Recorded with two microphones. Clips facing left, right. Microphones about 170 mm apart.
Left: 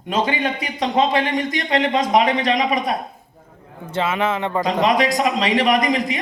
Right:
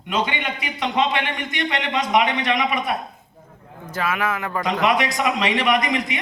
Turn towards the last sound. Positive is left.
turn(degrees=40)  # may be behind; listen again after turning